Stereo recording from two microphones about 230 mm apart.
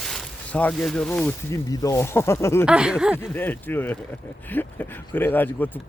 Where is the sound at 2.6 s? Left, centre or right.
Centre.